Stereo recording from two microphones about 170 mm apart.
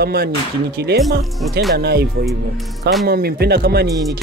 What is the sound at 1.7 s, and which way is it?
Speech, 70° right (ahead or behind).